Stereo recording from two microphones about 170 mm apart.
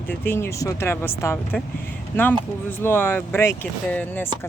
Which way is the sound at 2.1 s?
10° left (ahead or behind).